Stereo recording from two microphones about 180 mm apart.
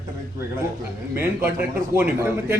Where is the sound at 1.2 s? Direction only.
10° right (ahead or behind).